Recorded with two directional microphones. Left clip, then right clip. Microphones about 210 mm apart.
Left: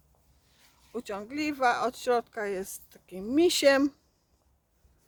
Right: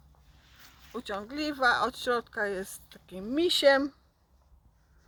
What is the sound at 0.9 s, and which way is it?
Speech, 25° left (ahead or behind).